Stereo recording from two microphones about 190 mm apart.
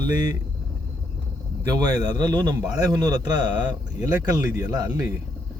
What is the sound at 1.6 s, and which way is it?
Speech, 20° right (ahead or behind).